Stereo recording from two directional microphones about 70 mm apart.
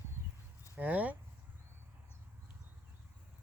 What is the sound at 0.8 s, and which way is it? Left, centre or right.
Speech, right.